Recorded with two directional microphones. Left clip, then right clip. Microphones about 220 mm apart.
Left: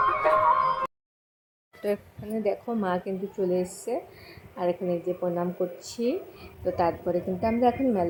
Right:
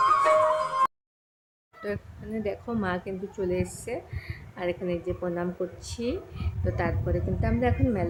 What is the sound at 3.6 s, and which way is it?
Speech, 30° right (ahead or behind).